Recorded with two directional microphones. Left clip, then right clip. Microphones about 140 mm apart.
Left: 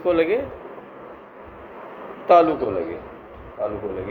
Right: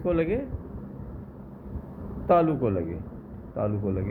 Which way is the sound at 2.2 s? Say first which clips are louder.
Left 7 dB; 10° left (ahead or behind).